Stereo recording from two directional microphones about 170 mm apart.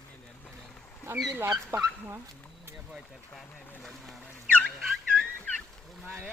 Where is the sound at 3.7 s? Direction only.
5° left (ahead or behind).